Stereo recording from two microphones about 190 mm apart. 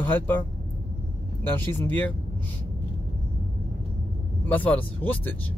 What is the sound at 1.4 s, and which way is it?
Speech, 10° left (ahead or behind).